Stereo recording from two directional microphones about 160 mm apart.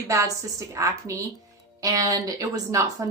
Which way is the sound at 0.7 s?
20° right (ahead or behind).